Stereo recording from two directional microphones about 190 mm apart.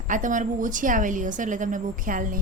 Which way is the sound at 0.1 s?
40° right (ahead or behind).